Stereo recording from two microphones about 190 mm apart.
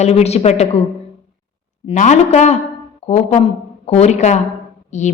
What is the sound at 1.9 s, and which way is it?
A woman's voice, 40° left (ahead or behind).